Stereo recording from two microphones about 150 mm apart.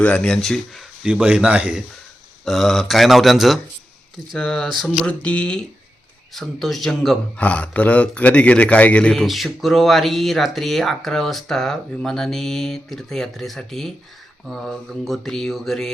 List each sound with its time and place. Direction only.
0.0 s speech: 5° left (ahead or behind)